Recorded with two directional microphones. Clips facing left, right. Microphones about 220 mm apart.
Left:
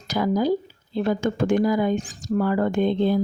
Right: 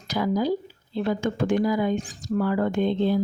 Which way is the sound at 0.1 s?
45° left (ahead or behind).